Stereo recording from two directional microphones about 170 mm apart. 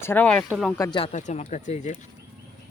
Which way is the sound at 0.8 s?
25° left (ahead or behind).